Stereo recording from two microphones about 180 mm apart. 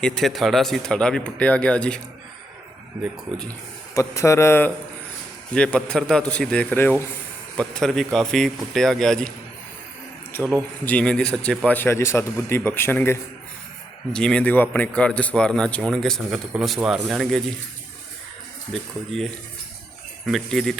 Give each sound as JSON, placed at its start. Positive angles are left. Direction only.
{"t": 0.0, "sound": "a man's voice", "side_deg": 5}
{"t": 3.9, "sound": "a man's voice", "side_deg": 15}
{"t": 10.8, "sound": "a man's voice", "side_deg": 5}
{"t": 18.7, "sound": "a man's voice", "side_deg": 0}